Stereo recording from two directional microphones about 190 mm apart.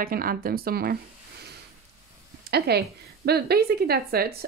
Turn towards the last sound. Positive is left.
turn(degrees=-55)  # may be behind; listen again after turning